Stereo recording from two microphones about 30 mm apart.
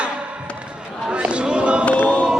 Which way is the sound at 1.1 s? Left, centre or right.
Right.